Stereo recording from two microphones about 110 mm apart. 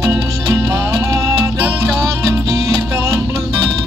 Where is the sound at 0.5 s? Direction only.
30° right (ahead or behind).